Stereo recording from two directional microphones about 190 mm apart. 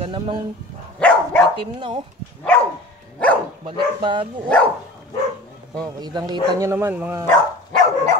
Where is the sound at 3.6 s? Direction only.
25° right (ahead or behind).